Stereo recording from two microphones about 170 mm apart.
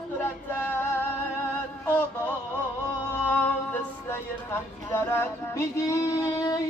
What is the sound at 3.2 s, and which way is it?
Music, 10° left (ahead or behind).